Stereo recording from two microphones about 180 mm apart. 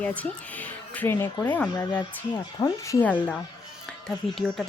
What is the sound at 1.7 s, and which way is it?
Speech, 20° left (ahead or behind).